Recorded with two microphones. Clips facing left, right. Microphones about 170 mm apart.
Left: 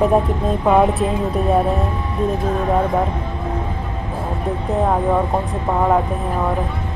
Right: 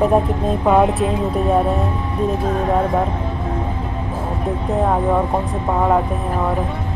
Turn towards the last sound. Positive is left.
turn(degrees=0)  # may be behind; listen again after turning